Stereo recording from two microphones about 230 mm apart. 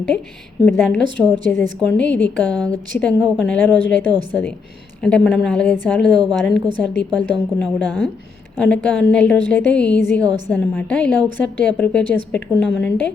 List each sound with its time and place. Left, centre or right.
0.6 s a woman's voice: centre